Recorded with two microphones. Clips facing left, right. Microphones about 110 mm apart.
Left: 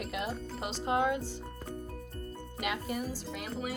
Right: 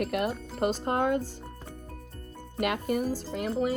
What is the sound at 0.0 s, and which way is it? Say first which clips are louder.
Speech: right 7 dB; 55° right (ahead or behind).